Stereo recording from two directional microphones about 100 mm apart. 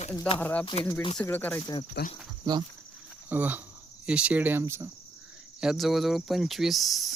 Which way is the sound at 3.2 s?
20° right (ahead or behind).